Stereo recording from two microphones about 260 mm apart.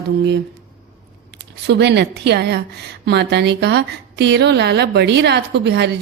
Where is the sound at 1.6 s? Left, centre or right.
Right.